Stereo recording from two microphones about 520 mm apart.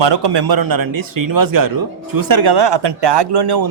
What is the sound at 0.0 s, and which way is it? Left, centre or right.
Speech, right.